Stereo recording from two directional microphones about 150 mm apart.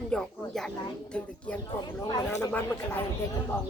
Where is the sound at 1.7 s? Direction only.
30° left (ahead or behind).